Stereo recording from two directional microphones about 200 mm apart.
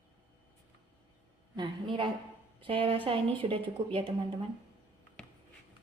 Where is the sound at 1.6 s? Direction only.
25° right (ahead or behind).